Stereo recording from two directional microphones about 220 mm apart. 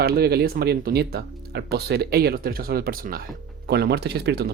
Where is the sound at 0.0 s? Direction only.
45° right (ahead or behind).